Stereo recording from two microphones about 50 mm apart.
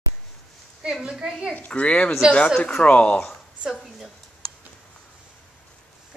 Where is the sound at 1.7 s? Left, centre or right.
Left.